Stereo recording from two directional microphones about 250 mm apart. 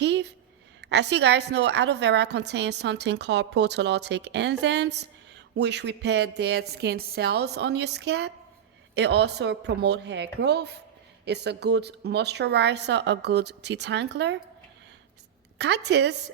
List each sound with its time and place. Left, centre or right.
0.0 s a sound: right
0.8 s a woman's voice: right
15.5 s a woman's voice: right